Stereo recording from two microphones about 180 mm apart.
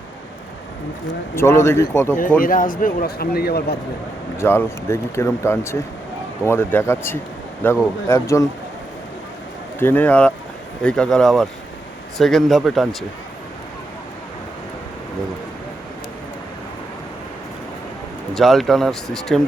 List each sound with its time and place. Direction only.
1.4 s speech: 15° left (ahead or behind)
2.4 s a man's voice: 50° left (ahead or behind)
4.4 s speech: 15° left (ahead or behind)
9.8 s speech: 10° left (ahead or behind)
18.3 s speech: centre (ahead or behind)